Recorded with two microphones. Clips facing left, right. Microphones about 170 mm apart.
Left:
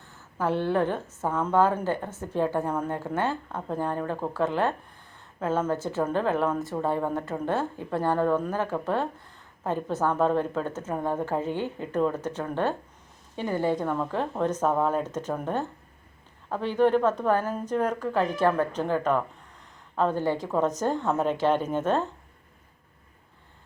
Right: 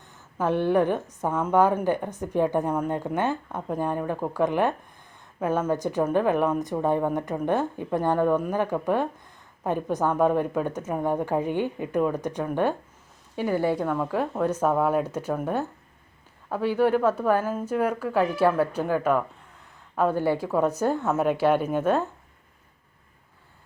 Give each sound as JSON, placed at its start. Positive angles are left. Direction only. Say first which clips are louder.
{"t": 0.0, "sound": "a woman's voice", "louder": "right 2 dB", "side_deg": -15}